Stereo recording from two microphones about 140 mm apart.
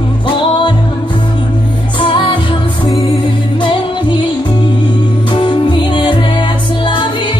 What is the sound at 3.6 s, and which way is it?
Music, 35° left (ahead or behind).